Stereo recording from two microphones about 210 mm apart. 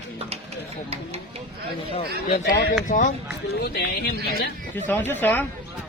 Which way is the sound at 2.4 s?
45° left (ahead or behind).